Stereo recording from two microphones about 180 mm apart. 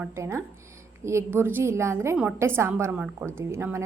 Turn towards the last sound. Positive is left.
turn(degrees=-15)  # may be behind; listen again after turning